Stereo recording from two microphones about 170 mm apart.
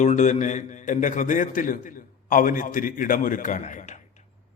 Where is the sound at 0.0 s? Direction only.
45° left (ahead or behind).